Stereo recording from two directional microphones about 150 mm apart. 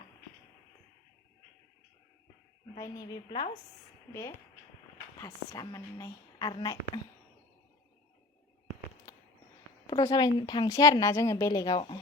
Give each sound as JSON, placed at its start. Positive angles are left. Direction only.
{"t": 2.7, "sound": "a woman's voice", "side_deg": 25}
{"t": 9.1, "sound": "a sound", "side_deg": 20}
{"t": 9.8, "sound": "a woman's voice", "side_deg": 25}